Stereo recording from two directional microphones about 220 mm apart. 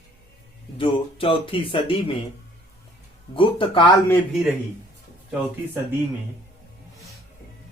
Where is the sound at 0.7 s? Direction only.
25° left (ahead or behind).